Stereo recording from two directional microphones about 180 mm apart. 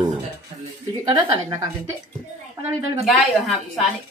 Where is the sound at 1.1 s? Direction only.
20° right (ahead or behind).